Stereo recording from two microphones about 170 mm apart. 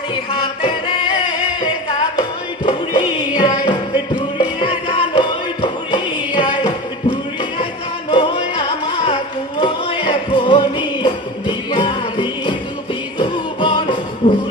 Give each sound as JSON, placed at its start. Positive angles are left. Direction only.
{"t": 0.1, "sound": "music", "side_deg": 30}